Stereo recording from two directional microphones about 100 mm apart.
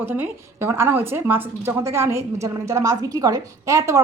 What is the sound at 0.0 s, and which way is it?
A woman's voice, 20° right (ahead or behind).